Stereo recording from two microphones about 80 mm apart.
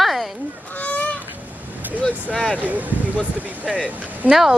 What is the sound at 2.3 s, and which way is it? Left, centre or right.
Speech, centre.